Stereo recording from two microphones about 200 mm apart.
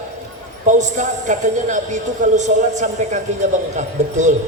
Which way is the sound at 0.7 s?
40° right (ahead or behind).